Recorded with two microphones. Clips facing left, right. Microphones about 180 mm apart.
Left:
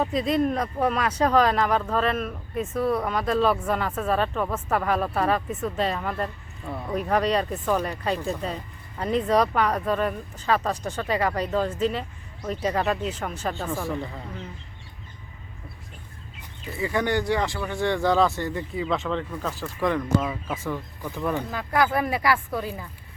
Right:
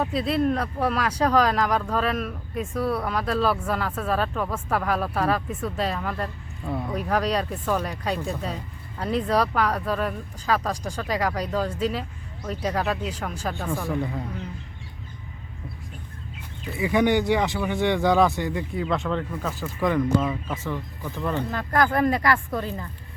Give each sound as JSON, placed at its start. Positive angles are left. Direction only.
{"t": 0.0, "sound": "speech", "side_deg": -5}
{"t": 0.4, "sound": "speech", "side_deg": 10}
{"t": 3.1, "sound": "speech", "side_deg": 0}
{"t": 7.6, "sound": "speech", "side_deg": 10}
{"t": 8.0, "sound": "speech", "side_deg": -5}
{"t": 9.5, "sound": "speech", "side_deg": 10}
{"t": 9.8, "sound": "speech", "side_deg": -5}
{"t": 13.9, "sound": "speech", "side_deg": -10}
{"t": 16.7, "sound": "speech", "side_deg": -15}
{"t": 18.8, "sound": "speech", "side_deg": 0}
{"t": 20.5, "sound": "speech", "side_deg": 10}